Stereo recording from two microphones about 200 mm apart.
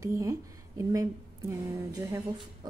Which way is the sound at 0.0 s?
15° right (ahead or behind).